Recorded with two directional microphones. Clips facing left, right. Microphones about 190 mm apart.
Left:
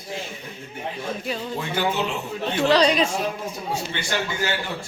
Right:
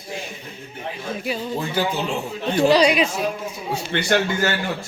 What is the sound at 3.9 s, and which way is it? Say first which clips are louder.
Speech: right 7 dB; 55° right (ahead or behind).